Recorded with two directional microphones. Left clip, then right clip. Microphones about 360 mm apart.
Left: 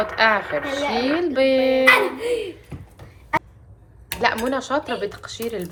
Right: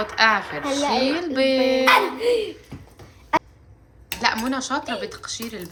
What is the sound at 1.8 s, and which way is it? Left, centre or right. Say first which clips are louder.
Speech: left 1 dB; centre.